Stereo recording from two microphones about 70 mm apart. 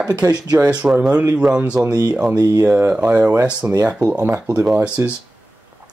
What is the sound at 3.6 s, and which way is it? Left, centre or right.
Speech, right.